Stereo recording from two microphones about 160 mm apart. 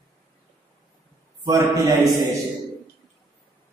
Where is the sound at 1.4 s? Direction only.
20° right (ahead or behind).